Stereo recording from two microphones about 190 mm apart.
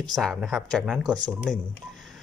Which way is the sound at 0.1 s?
Centre (ahead or behind).